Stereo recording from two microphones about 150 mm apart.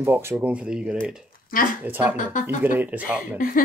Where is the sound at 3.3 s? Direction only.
70° left (ahead or behind).